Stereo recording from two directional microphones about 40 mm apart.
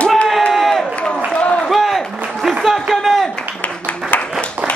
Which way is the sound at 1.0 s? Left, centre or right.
Left.